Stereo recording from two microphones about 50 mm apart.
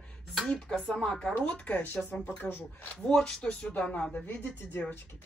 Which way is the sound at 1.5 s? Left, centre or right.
Left.